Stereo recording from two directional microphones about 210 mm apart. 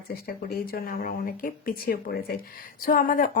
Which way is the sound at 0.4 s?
45° left (ahead or behind).